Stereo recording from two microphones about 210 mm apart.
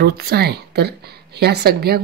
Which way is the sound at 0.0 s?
50° right (ahead or behind).